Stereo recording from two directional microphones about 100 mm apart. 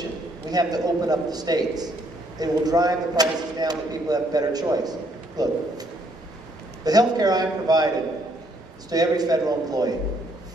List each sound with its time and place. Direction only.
0.5 s speech: 40° right (ahead or behind)
6.8 s speech: 40° right (ahead or behind)
8.9 s speech: 40° right (ahead or behind)